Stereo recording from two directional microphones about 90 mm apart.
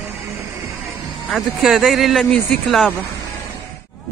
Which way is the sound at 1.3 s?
Centre (ahead or behind).